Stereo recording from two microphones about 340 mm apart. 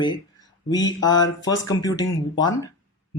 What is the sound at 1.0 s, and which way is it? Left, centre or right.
Speech, centre.